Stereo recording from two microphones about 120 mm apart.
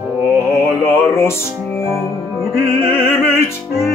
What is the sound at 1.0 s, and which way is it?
Music, 20° left (ahead or behind).